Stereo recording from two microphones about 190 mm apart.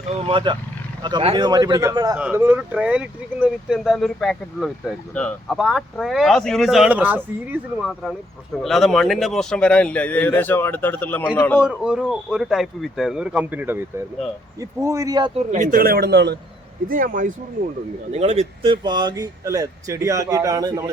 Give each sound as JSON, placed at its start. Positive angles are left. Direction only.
{"t": 0.1, "sound": "speech", "side_deg": -25}
{"t": 11.6, "sound": "speech", "side_deg": -5}
{"t": 15.4, "sound": "speech", "side_deg": -40}
{"t": 16.9, "sound": "speech", "side_deg": -45}
{"t": 18.1, "sound": "speech", "side_deg": -35}